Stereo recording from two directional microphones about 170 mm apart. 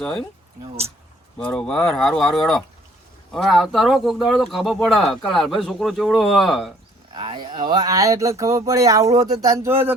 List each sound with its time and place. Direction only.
0.0 s speech: 5° left (ahead or behind)
1.4 s speech: 5° left (ahead or behind)
7.2 s speech: 25° right (ahead or behind)